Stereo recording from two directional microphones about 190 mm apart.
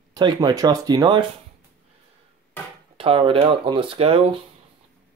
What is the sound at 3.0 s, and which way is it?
Speech, 30° right (ahead or behind).